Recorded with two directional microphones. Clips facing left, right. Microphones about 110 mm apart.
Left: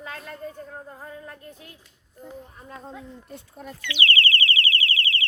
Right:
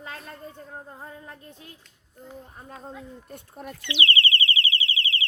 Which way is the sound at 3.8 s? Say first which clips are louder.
Left 1 dB; 25° right (ahead or behind).